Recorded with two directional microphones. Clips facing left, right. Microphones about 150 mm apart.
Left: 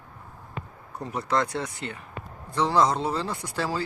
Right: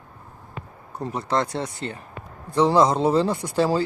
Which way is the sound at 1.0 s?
30° right (ahead or behind).